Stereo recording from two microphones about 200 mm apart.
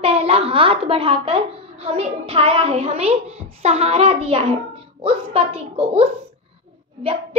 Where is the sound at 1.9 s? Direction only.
30° right (ahead or behind).